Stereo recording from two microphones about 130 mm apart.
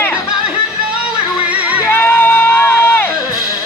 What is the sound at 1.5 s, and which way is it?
Music, 10° right (ahead or behind).